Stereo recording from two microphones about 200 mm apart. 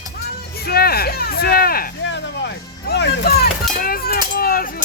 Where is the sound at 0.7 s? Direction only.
50° left (ahead or behind).